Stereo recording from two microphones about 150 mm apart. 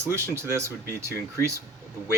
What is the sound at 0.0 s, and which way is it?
Speech, 15° right (ahead or behind).